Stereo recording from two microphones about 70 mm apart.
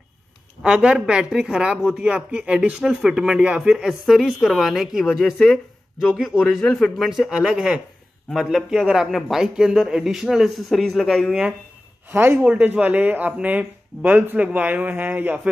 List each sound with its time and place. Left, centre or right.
0.6 s speech: centre
12.1 s speech: right